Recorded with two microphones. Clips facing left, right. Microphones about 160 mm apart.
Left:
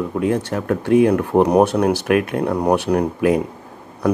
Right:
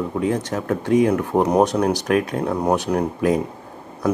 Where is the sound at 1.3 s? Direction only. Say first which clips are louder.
Left 3 dB; 15° left (ahead or behind).